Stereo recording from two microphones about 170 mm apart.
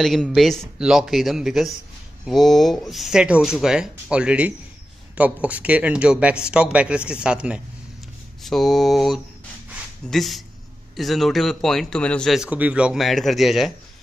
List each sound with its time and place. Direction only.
0.0 s speech: centre (ahead or behind)